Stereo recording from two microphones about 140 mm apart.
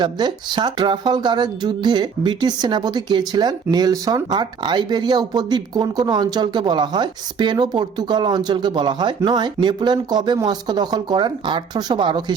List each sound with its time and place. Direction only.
0.0 s speech: 30° right (ahead or behind)